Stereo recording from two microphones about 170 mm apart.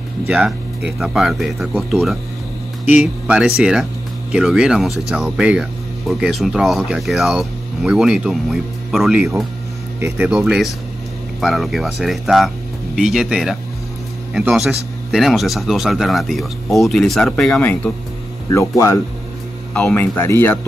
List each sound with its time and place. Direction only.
0.3 s speech: 5° right (ahead or behind)
9.9 s speech: 10° right (ahead or behind)
10.3 s speech: centre (ahead or behind)
15.0 s speech: centre (ahead or behind); by 18.9 s 15° left (ahead or behind)
19.7 s speech: 5° left (ahead or behind)